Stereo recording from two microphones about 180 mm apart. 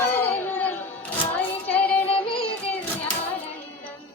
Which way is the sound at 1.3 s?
10° left (ahead or behind).